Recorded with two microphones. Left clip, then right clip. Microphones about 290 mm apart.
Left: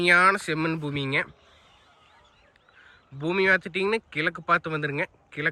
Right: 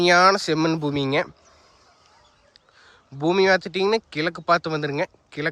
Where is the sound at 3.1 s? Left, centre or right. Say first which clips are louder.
Right 4 dB; centre.